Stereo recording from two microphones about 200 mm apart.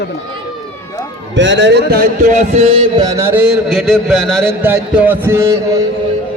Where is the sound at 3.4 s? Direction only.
5° right (ahead or behind).